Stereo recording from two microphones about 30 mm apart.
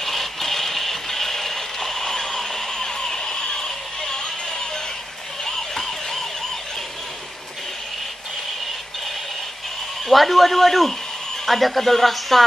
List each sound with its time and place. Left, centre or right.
0.0 s a sound: centre
4.1 s music: centre
5.8 s emergency vehicle: centre
10.0 s speech: centre